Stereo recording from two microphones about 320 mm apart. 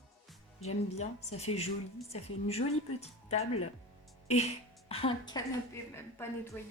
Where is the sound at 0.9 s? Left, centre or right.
Centre.